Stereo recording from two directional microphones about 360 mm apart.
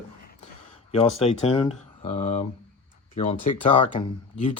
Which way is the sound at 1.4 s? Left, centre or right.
Centre.